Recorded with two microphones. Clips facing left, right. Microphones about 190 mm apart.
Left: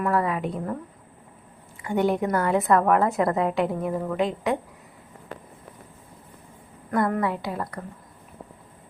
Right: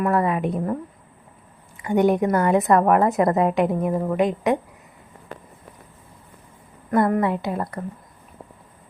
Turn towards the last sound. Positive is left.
turn(degrees=-25)  # may be behind; listen again after turning